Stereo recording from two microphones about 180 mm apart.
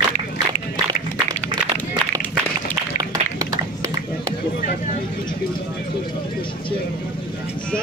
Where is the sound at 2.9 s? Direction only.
20° right (ahead or behind).